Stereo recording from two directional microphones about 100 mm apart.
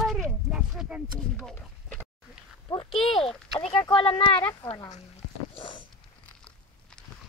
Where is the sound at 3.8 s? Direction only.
60° left (ahead or behind).